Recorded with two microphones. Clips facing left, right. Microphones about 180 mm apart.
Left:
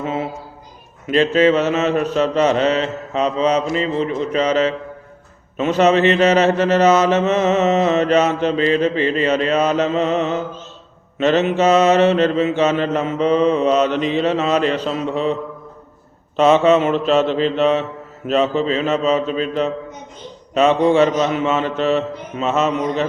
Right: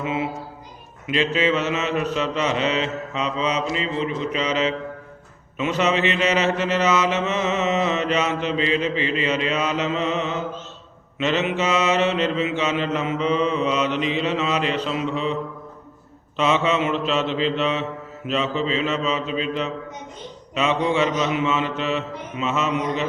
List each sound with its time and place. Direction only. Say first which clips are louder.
0.0 s speech: left 2 dB; 40° left (ahead or behind)
1.0 s mantra: left 7 dB; 45° left (ahead or behind)
16.4 s mantra: left 8 dB; 45° left (ahead or behind)